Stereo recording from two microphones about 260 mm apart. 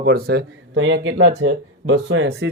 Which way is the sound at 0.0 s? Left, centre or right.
Right.